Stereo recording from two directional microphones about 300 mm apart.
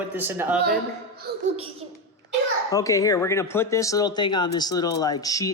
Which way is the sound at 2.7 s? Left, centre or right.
Centre.